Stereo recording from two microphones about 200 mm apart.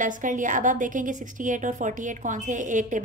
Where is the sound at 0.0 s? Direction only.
40° right (ahead or behind).